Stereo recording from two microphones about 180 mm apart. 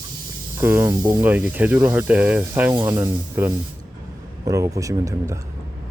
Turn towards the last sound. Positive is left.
turn(degrees=-20)  # may be behind; listen again after turning